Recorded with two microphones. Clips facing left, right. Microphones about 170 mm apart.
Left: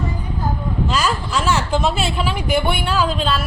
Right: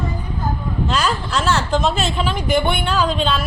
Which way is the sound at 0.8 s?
5° left (ahead or behind).